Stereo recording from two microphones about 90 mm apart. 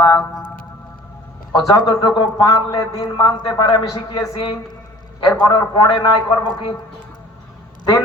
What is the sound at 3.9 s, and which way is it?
Speech, 40° left (ahead or behind).